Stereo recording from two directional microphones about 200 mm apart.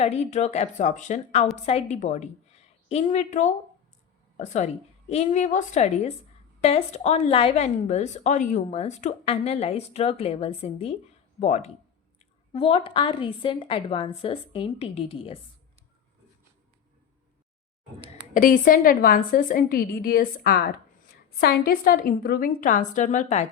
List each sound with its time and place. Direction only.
0.0 s a woman's voice: 30° left (ahead or behind)
18.3 s a woman's voice: 45° left (ahead or behind)